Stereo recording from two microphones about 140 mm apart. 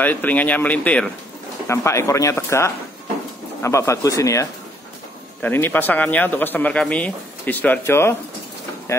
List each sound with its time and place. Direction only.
0.0 s speech: 10° left (ahead or behind)
1.7 s speech: 20° left (ahead or behind)